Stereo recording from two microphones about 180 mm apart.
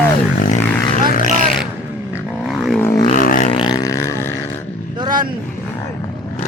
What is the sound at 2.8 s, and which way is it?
Vehicle, 15° left (ahead or behind).